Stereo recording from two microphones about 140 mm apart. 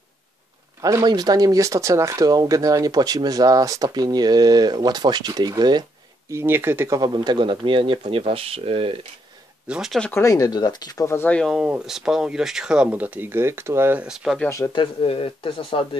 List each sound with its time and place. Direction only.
0.7 s speech: 25° right (ahead or behind)
6.3 s speech: 15° right (ahead or behind)
7.0 s speech: 30° right (ahead or behind)
9.7 s speech: centre (ahead or behind)
10.1 s speech: 25° left (ahead or behind)
11.4 s speech: 5° right (ahead or behind)
14.0 s speech: 5° right (ahead or behind)
14.7 s speech: 35° left (ahead or behind)